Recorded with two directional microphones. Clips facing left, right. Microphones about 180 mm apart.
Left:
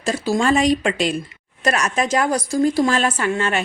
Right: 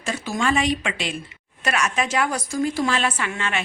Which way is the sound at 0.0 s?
35° left (ahead or behind).